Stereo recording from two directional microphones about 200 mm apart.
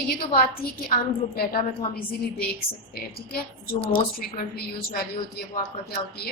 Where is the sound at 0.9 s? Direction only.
45° left (ahead or behind).